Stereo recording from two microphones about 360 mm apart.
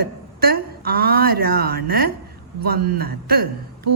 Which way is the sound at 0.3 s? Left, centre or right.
Right.